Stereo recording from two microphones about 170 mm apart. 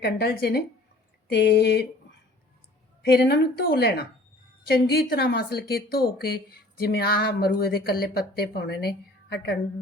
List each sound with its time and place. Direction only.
0.0 s a woman's voice: 70° left (ahead or behind)
3.0 s a woman's voice: 70° left (ahead or behind)